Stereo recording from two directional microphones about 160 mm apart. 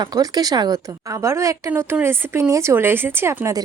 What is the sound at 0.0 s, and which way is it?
A woman's voice, 25° right (ahead or behind).